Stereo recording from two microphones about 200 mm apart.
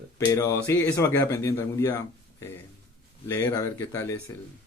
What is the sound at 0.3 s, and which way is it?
Speech, 15° left (ahead or behind).